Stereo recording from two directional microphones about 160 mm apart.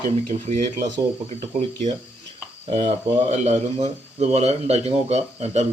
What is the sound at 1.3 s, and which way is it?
A man's voice, 45° right (ahead or behind).